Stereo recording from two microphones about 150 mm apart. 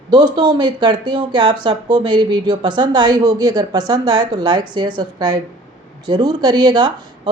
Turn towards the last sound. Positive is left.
turn(degrees=-30)  # may be behind; listen again after turning